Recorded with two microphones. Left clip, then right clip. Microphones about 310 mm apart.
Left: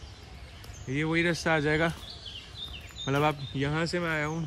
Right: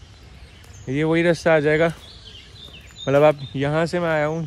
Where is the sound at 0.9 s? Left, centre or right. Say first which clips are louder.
Right 9 dB; centre.